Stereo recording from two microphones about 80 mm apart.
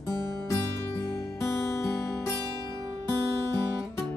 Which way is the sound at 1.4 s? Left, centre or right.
Left.